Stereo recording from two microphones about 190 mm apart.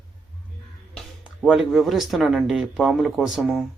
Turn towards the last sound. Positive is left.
turn(degrees=0)  # may be behind; listen again after turning